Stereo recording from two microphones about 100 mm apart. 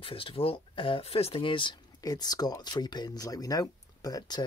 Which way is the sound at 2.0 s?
40° left (ahead or behind).